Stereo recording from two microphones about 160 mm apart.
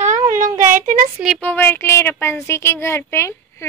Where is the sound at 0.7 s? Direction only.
55° right (ahead or behind).